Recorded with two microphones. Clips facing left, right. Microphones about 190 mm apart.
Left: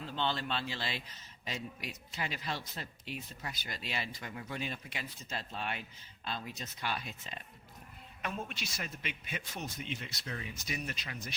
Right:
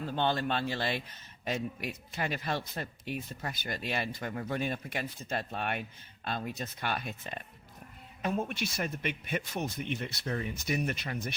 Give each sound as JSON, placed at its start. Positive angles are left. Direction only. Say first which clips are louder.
{"t": 0.0, "sound": "a man's voice", "louder": "right 5 dB", "side_deg": -50}